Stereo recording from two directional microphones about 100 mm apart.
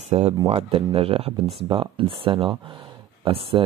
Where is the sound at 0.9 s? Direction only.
70° right (ahead or behind).